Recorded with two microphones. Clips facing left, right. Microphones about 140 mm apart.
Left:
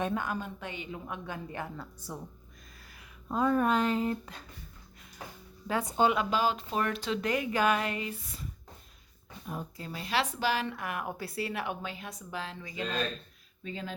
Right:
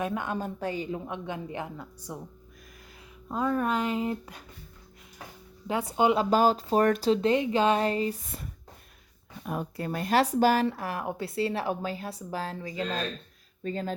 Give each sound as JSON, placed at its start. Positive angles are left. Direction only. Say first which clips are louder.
{"t": 0.0, "sound": "a woman's voice", "louder": "right 1 dB", "side_deg": -20}
{"t": 0.3, "sound": "speech", "louder": "right 7 dB", "side_deg": -40}
{"t": 1.0, "sound": "a woman's voice", "louder": "right 4 dB", "side_deg": -20}
{"t": 3.2, "sound": "speech", "louder": "left 1 dB", "side_deg": 0}
{"t": 5.8, "sound": "speech", "louder": "right 3 dB", "side_deg": -15}
{"t": 6.1, "sound": "speech", "louder": "right 6 dB", "side_deg": -40}
{"t": 8.3, "sound": "speech", "louder": "right 3 dB", "side_deg": -55}
{"t": 9.4, "sound": "speech", "louder": "right 7 dB", "side_deg": -65}